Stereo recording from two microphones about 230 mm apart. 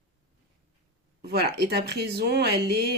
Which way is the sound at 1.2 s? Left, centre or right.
Right.